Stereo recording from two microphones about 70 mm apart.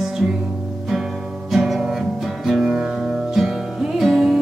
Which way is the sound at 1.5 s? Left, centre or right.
Centre.